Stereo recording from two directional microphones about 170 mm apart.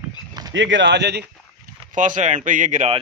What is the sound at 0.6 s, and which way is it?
Speech, 90° right.